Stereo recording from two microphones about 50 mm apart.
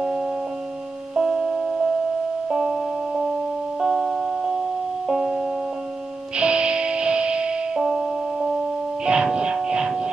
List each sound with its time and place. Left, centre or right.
1.1 s music: centre
6.3 s music: right